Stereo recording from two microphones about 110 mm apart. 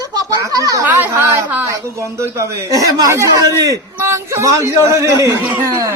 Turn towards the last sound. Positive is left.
turn(degrees=-25)  # may be behind; listen again after turning